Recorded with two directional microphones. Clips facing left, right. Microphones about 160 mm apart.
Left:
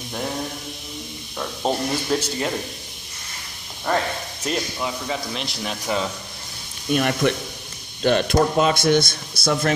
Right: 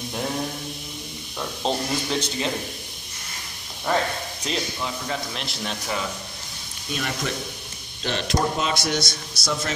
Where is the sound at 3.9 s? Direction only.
5° right (ahead or behind).